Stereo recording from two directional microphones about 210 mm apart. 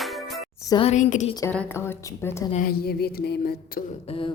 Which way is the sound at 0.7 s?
30° left (ahead or behind).